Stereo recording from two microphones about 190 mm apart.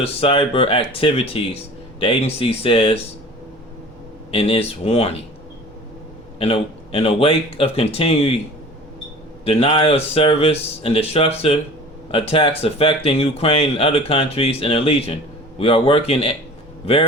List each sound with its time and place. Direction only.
0.0 s speech: 30° left (ahead or behind)
4.3 s speech: 30° left (ahead or behind)
6.4 s speech: 30° left (ahead or behind)
9.4 s speech: 30° left (ahead or behind)